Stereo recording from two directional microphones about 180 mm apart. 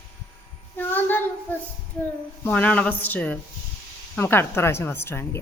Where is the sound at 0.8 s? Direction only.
10° left (ahead or behind).